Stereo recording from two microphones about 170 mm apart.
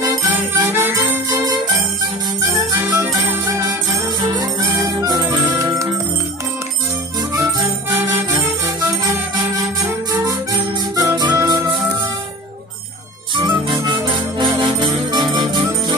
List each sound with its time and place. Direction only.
0.6 s jingle bell: 10° right (ahead or behind)
1.3 s jingle bell: 20° right (ahead or behind)
4.2 s music: 20° right (ahead or behind)
8.4 s music: 20° right (ahead or behind)
13.4 s music: 30° right (ahead or behind)